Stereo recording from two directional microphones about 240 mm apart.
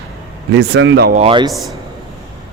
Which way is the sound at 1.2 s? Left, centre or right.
Right.